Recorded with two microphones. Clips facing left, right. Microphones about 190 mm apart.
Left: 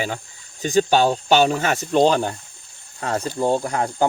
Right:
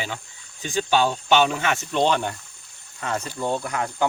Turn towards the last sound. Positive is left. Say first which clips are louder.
# left 5 dB
turn(degrees=35)  # may be behind; listen again after turning